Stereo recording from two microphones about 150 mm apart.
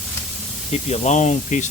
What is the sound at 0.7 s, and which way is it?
Speech, 45° left (ahead or behind).